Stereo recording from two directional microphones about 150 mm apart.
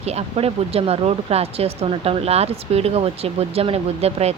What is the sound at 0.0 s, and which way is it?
A woman's voice, 45° right (ahead or behind).